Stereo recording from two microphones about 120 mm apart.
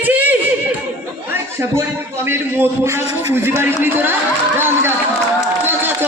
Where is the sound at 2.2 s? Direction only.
20° right (ahead or behind).